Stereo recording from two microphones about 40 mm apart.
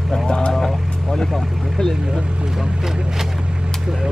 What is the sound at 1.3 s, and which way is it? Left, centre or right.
Speech, centre.